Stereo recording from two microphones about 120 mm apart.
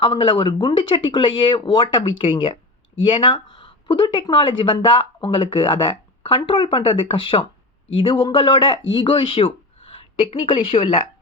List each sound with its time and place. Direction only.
0.0 s speech: 45° left (ahead or behind)